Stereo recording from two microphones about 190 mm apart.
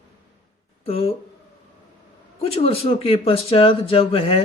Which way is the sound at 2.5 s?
30° left (ahead or behind).